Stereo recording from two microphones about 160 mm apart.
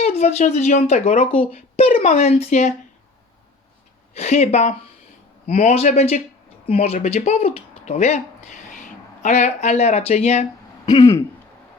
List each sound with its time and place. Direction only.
0.2 s speech: 45° left (ahead or behind)
4.1 s speech: 45° left (ahead or behind)
10.8 s throat clearing: 20° left (ahead or behind)